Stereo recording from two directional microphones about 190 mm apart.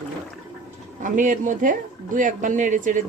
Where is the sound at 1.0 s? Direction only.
45° right (ahead or behind).